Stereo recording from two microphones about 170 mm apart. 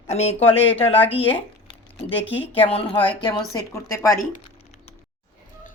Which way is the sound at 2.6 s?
35° left (ahead or behind).